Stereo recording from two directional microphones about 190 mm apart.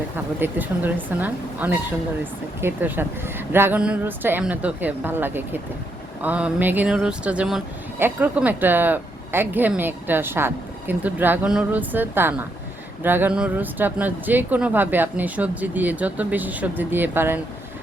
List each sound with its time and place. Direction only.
0.3 s speech: 10° right (ahead or behind)